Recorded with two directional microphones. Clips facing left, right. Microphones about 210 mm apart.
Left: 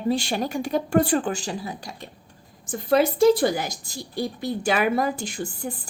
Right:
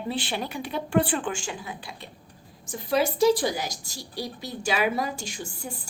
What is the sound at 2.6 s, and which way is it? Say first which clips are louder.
A woman's voice: left 5 dB; 55° left (ahead or behind).